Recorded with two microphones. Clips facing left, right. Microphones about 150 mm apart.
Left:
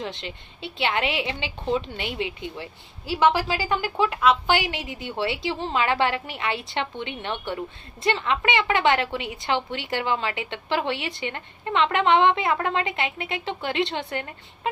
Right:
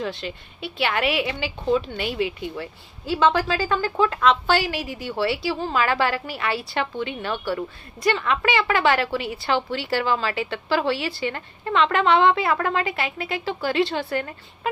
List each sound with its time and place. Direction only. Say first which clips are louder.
0.0 s a woman's voice: right 4 dB; 20° left (ahead or behind)
3.1 s a woman's voice: right 1 dB; 10° left (ahead or behind)